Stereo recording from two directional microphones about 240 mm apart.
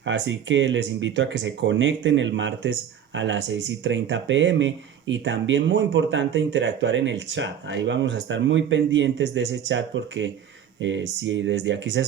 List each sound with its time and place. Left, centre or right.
0.0 s speech: right